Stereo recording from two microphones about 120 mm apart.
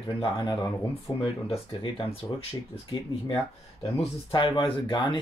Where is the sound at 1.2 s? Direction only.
50° left (ahead or behind).